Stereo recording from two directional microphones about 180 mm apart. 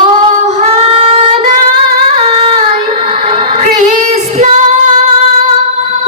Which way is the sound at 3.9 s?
45° right (ahead or behind).